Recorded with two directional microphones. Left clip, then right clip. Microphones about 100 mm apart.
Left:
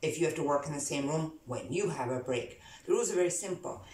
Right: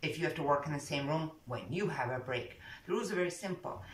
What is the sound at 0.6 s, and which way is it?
Speech, 25° left (ahead or behind).